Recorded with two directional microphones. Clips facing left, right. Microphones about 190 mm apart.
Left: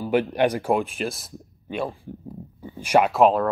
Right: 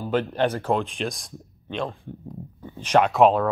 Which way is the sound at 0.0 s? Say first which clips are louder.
Left 2 dB; 10° left (ahead or behind).